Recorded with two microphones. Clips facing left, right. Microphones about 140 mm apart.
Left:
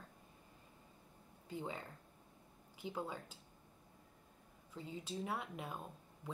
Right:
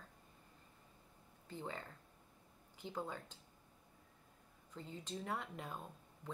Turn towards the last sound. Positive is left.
turn(degrees=5)  # may be behind; listen again after turning